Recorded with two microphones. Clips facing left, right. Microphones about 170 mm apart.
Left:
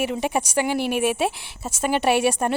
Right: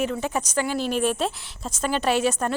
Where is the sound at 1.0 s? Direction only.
10° left (ahead or behind).